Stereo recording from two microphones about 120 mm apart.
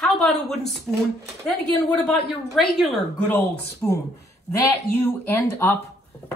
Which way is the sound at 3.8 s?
15° left (ahead or behind).